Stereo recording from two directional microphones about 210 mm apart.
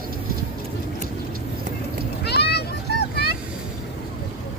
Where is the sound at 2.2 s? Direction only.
50° left (ahead or behind).